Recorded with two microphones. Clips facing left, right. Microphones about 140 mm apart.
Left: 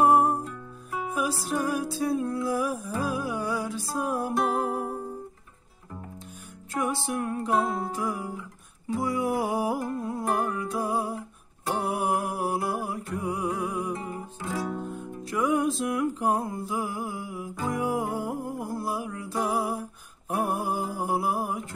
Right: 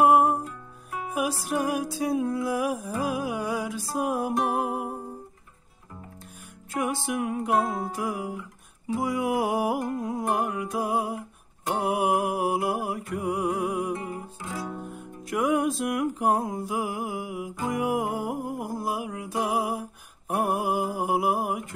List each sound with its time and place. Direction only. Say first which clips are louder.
0.0 s music: right 1 dB; 10° right (ahead or behind)
6.7 s music: right 1 dB; 10° right (ahead or behind)
16.2 s mantra: right 2 dB; 10° right (ahead or behind)
17.6 s music: right 1 dB; 10° right (ahead or behind)
20.3 s mantra: right 2 dB; 5° right (ahead or behind)